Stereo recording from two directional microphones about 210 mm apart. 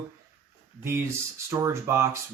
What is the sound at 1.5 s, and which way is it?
Speech, 15° right (ahead or behind).